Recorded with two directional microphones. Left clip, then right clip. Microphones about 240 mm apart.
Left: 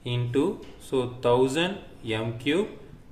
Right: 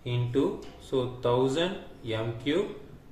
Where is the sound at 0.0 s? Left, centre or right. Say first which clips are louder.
Left 2 dB; left.